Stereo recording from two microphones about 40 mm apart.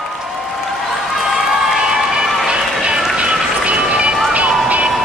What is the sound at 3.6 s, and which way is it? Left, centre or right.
Music, right.